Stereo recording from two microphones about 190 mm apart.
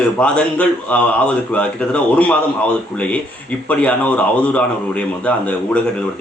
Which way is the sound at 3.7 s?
5° left (ahead or behind).